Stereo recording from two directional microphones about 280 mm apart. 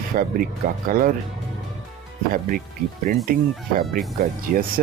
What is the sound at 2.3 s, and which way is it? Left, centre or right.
Speech, right.